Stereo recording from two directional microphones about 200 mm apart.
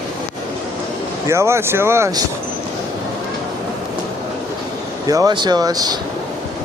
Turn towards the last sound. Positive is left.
turn(degrees=-20)  # may be behind; listen again after turning